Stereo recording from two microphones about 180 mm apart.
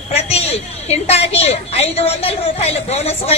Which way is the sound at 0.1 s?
35° left (ahead or behind).